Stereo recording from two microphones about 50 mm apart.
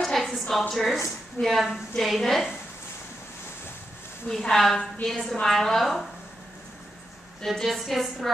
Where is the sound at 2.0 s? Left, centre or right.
Centre.